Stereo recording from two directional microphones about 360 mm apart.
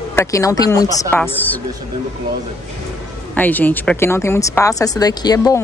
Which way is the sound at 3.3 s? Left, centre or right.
Centre.